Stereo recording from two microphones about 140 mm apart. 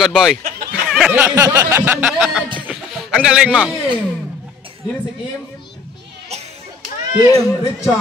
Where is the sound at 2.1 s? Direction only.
Centre (ahead or behind).